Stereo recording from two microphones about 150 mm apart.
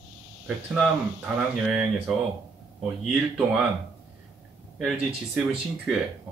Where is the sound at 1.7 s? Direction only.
Centre (ahead or behind).